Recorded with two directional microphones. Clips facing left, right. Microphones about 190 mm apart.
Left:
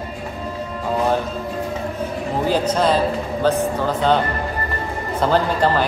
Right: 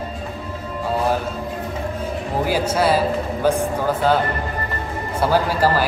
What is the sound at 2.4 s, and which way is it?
A man's voice, 10° right (ahead or behind).